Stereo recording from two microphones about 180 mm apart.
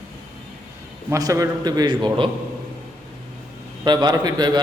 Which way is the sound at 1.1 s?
20° right (ahead or behind).